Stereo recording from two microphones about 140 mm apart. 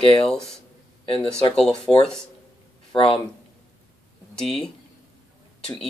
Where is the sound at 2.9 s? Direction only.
40° left (ahead or behind).